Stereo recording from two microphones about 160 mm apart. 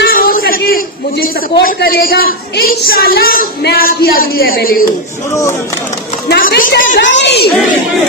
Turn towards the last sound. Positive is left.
turn(degrees=90)